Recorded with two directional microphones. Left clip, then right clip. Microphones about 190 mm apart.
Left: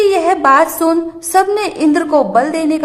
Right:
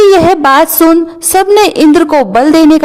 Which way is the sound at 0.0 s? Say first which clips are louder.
Right 6 dB; 40° right (ahead or behind).